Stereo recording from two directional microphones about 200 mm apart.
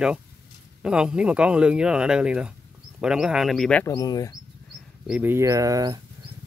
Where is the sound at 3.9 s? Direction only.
20° left (ahead or behind).